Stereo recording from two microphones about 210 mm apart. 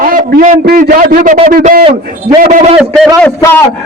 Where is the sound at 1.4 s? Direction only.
40° right (ahead or behind).